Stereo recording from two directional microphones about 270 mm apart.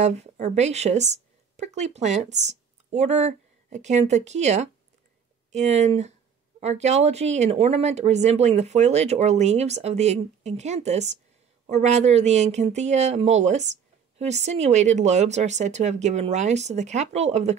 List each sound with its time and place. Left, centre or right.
0.0 s speech: right